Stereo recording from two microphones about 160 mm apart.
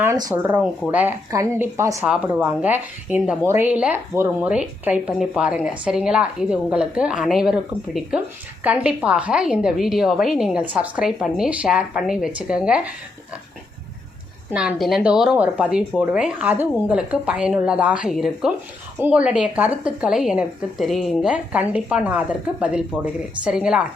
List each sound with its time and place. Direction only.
0.0 s a woman's voice: 20° right (ahead or behind)
2.0 s a woman's voice: 5° right (ahead or behind)
14.5 s a woman's voice: 5° right (ahead or behind)